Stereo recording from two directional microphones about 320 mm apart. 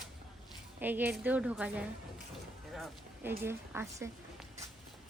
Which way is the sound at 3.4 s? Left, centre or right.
Centre.